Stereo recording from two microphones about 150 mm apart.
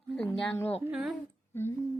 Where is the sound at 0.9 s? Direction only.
5° right (ahead or behind).